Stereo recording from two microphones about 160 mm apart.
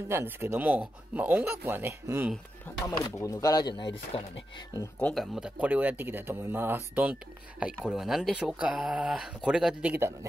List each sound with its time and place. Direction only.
0.1 s speech: 15° right (ahead or behind)
3.2 s speech: 20° left (ahead or behind)
5.0 s speech: centre (ahead or behind)